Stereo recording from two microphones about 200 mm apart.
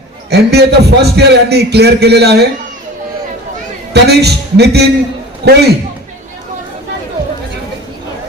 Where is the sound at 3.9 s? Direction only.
55° right (ahead or behind).